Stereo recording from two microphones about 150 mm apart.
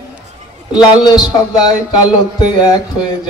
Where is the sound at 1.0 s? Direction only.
30° left (ahead or behind).